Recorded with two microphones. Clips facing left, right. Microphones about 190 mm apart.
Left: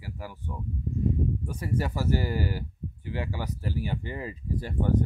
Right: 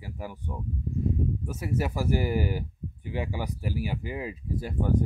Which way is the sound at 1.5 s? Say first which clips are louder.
Right 1 dB; 5° right (ahead or behind).